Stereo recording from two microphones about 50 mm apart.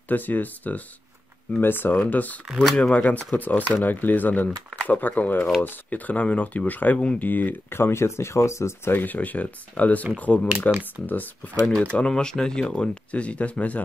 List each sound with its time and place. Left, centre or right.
0.1 s speech: left
2.6 s speech: centre
2.9 s speech: left
7.7 s speech: left
8.9 s speech: left
11.9 s speech: centre